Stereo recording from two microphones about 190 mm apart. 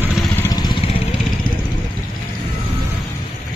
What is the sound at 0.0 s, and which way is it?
Vehicle, centre (ahead or behind).